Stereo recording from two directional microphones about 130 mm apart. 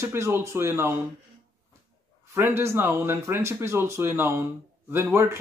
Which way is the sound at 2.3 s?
20° right (ahead or behind).